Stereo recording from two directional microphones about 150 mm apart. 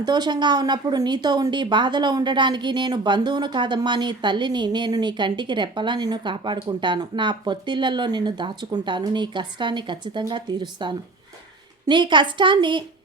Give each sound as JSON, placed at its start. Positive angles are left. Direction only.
{"t": 0.0, "sound": "speech", "side_deg": -30}